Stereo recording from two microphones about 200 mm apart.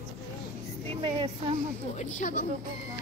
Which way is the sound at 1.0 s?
25° right (ahead or behind).